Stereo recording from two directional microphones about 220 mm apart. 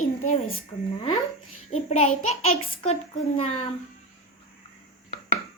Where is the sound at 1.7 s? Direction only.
30° left (ahead or behind).